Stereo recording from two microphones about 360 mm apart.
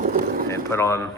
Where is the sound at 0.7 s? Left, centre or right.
Centre.